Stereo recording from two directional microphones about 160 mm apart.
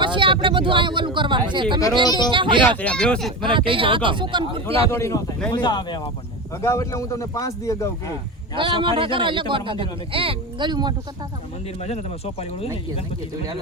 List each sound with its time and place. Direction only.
0.0 s a man's voice: 30° right (ahead or behind)
2.0 s a man's voice: 25° left (ahead or behind)
2.3 s a man's voice: 30° right (ahead or behind)
2.6 s speech: 10° left (ahead or behind)
3.4 s a man's voice: 30° right (ahead or behind)
4.9 s a man's voice: 15° left (ahead or behind)
8.5 s a man's voice: 30° right (ahead or behind)
11.8 s speech: 40° left (ahead or behind)